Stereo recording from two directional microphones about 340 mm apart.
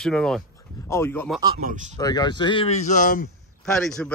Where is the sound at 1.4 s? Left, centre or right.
Centre.